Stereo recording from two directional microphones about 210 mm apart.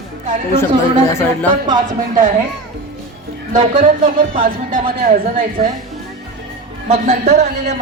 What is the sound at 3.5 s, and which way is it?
Speech, 40° right (ahead or behind).